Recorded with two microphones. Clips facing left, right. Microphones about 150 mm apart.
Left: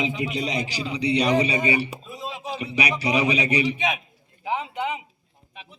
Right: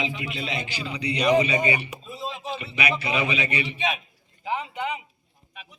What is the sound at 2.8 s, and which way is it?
Speech, 35° left (ahead or behind).